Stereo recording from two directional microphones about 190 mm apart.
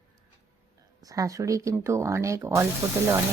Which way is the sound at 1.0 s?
20° right (ahead or behind).